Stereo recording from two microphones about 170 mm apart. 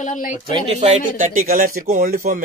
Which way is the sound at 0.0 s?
50° left (ahead or behind).